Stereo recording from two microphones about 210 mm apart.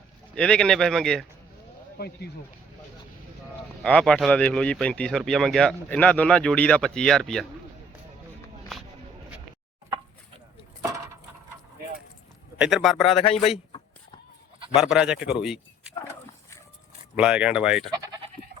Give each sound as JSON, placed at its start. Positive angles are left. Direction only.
{"t": 0.3, "sound": "speech", "side_deg": 5}
{"t": 2.0, "sound": "speech", "side_deg": 50}
{"t": 3.8, "sound": "speech", "side_deg": 5}
{"t": 8.7, "sound": "a sound", "side_deg": 0}
{"t": 12.5, "sound": "speech", "side_deg": -5}
{"t": 14.8, "sound": "speech", "side_deg": -5}
{"t": 17.2, "sound": "speech", "side_deg": -5}
{"t": 17.9, "sound": "goat", "side_deg": -20}